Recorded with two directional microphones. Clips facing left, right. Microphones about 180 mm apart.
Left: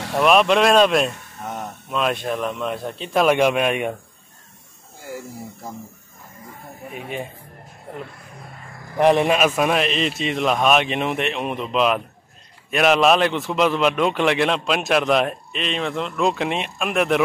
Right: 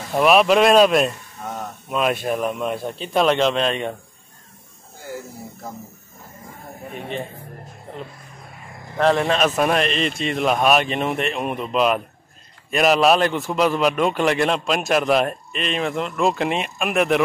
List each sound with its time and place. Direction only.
0.1 s a man's voice: centre (ahead or behind)
3.3 s a man's voice: 10° left (ahead or behind)
6.9 s a man's voice: 5° left (ahead or behind)
8.9 s a man's voice: 15° left (ahead or behind); by 17.2 s centre (ahead or behind)